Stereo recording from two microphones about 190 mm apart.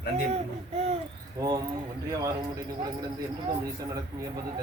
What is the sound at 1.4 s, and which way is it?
Speech, 20° right (ahead or behind).